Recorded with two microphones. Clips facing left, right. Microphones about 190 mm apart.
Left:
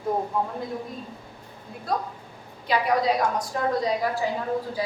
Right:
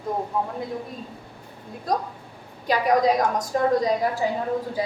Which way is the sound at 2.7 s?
45° right (ahead or behind).